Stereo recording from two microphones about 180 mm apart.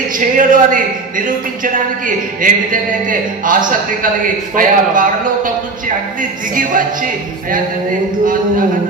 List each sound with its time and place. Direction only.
0.2 s speech: 50° right (ahead or behind)
6.5 s speech: 50° right (ahead or behind)